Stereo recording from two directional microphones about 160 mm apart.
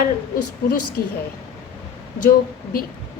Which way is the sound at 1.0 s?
65° left (ahead or behind).